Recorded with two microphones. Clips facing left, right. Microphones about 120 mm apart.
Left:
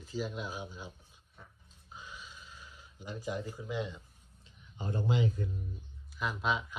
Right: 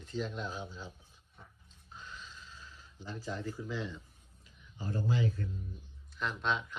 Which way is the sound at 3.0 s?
15° left (ahead or behind).